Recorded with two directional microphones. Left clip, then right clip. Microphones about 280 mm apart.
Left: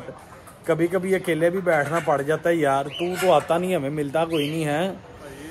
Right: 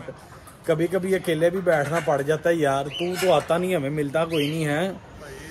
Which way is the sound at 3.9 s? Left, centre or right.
Centre.